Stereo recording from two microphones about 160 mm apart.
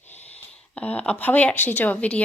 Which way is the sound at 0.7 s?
5° left (ahead or behind).